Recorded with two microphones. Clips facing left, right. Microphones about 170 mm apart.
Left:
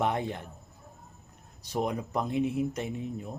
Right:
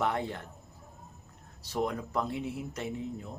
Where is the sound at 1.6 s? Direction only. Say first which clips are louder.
Left 1 dB; 15° left (ahead or behind).